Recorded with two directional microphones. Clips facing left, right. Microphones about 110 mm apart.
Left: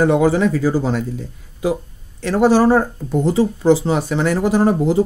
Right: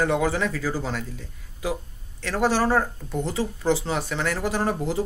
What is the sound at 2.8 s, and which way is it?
Speech, 35° left (ahead or behind).